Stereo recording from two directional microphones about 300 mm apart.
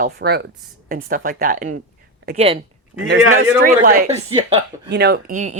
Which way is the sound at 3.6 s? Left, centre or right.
Right.